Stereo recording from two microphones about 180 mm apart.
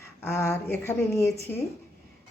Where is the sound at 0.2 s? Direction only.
15° left (ahead or behind).